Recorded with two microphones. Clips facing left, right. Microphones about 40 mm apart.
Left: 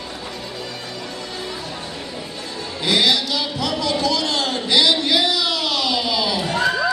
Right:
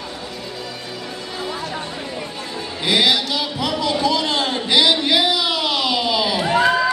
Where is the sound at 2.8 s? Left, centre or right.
Centre.